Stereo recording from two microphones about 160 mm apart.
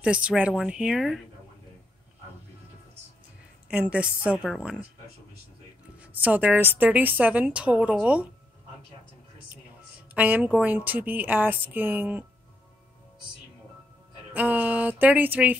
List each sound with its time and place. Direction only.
0.0 s a woman's voice: 5° right (ahead or behind)
3.6 s a woman's voice: 5° right (ahead or behind)
5.9 s a woman's voice: 10° right (ahead or behind)
10.1 s a woman's voice: 10° right (ahead or behind)
14.3 s a woman's voice: 10° right (ahead or behind)